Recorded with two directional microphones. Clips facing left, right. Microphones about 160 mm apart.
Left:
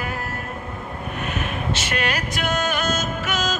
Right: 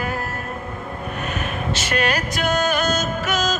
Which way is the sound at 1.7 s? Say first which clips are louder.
Right 4 dB; 40° right (ahead or behind).